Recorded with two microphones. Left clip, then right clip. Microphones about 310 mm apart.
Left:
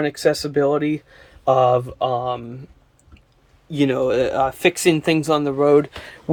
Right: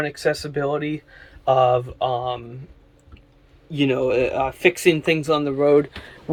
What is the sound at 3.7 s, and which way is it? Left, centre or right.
Speech, centre.